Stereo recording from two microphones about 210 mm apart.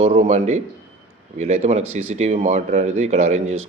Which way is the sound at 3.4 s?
75° right (ahead or behind).